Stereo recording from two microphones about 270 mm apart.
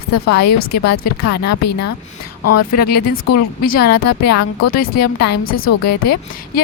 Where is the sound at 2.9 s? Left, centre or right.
Left.